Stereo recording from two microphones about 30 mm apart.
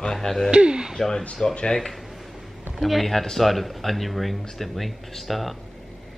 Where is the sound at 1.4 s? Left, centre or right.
Left.